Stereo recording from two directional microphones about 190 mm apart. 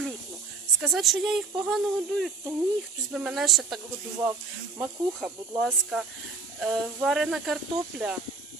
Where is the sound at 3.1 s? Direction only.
Centre (ahead or behind).